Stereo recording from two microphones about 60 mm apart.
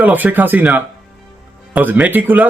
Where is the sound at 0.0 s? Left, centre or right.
Right.